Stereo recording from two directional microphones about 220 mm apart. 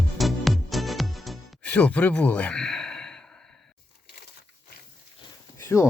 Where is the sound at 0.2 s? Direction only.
Centre (ahead or behind).